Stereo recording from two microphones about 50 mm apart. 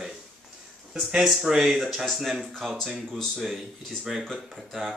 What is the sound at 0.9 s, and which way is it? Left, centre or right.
Speech, centre.